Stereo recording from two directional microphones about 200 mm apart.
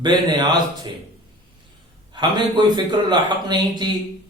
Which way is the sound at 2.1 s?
20° right (ahead or behind).